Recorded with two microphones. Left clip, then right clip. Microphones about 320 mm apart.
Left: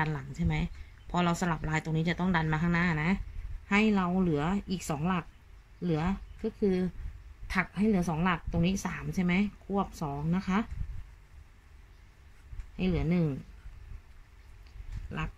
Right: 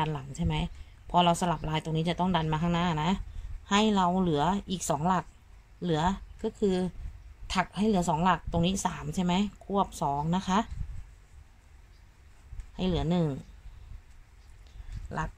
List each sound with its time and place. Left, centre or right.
0.0 s speech: centre
12.7 s speech: centre